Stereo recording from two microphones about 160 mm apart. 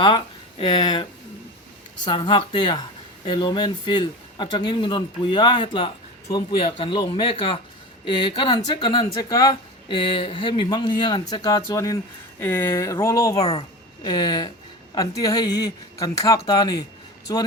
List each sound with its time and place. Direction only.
0.6 s speech: 30° left (ahead or behind)
2.0 s speech: 30° left (ahead or behind)
13.4 s speech: 40° left (ahead or behind)
14.0 s speech: 30° left (ahead or behind)